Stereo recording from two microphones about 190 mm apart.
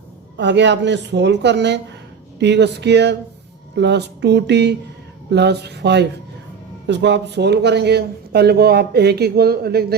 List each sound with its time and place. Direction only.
0.3 s a woman's voice: 65° right (ahead or behind)